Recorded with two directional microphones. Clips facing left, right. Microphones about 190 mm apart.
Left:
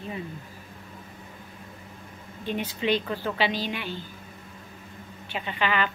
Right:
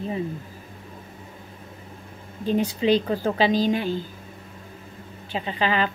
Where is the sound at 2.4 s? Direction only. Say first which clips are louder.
Right 6 dB; 35° right (ahead or behind).